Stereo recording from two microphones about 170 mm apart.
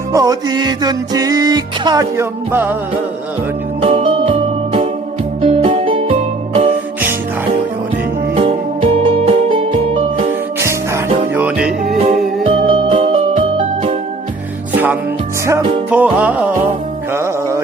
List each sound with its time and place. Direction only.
0.1 s music: 20° right (ahead or behind)
3.8 s music: 35° right (ahead or behind)
8.4 s music: 35° right (ahead or behind)
10.6 s music: 15° right (ahead or behind)
11.9 s music: 40° right (ahead or behind)
15.9 s music: 10° right (ahead or behind)